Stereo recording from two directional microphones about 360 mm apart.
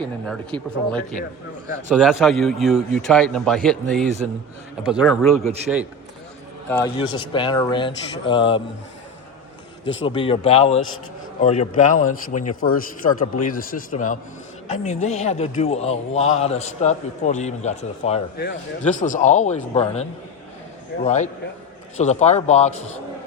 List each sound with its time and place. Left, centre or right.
0.0 s a man's voice: centre
6.7 s speech: centre
10.1 s a man's voice: centre